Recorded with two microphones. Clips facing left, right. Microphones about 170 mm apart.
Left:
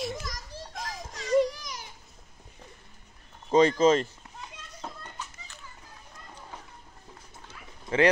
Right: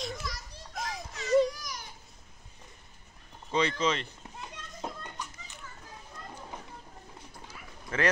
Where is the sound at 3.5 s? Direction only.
45° left (ahead or behind).